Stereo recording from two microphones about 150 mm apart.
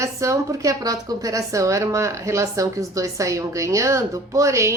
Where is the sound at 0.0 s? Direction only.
20° right (ahead or behind).